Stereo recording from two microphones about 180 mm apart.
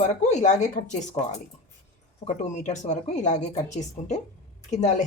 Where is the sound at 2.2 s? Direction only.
40° left (ahead or behind).